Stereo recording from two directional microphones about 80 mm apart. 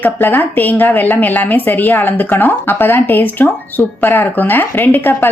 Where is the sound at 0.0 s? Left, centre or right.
Left.